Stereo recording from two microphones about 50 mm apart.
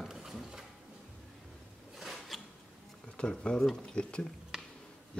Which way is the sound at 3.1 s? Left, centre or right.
Centre.